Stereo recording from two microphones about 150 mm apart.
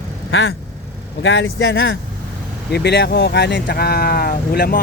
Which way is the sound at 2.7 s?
90° left.